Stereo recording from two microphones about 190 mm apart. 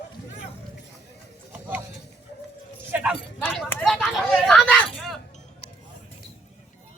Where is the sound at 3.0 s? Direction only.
5° right (ahead or behind).